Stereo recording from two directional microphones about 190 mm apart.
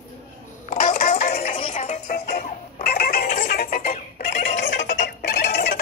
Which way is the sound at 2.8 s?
50° left (ahead or behind).